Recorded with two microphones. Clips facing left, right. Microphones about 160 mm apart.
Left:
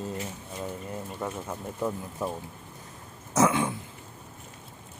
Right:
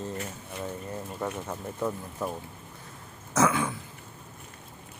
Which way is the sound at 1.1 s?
Centre (ahead or behind).